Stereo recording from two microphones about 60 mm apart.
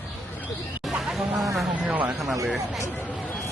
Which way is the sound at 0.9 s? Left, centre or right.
Centre.